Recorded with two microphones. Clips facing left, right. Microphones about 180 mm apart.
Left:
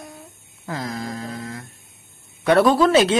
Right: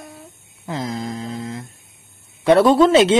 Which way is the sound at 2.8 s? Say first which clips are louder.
Right 3 dB; 25° right (ahead or behind).